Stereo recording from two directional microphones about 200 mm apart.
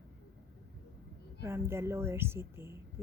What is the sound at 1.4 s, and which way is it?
A woman's voice, 10° right (ahead or behind).